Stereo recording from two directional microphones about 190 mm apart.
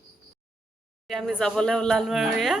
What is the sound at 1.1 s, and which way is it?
A woman's voice, centre (ahead or behind).